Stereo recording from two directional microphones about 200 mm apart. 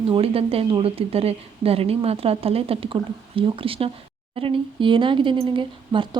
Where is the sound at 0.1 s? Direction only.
30° right (ahead or behind).